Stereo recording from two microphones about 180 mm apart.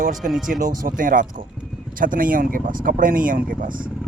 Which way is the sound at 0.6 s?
50° right (ahead or behind).